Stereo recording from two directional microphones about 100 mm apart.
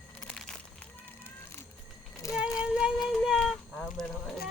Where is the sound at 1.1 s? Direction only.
25° left (ahead or behind).